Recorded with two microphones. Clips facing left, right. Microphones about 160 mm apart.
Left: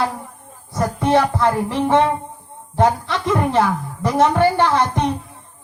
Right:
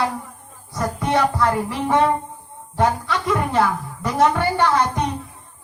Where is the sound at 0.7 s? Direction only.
25° left (ahead or behind).